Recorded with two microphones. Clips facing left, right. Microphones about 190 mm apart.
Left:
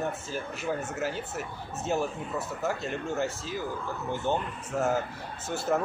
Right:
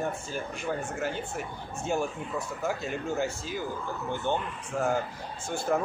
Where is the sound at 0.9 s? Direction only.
5° left (ahead or behind).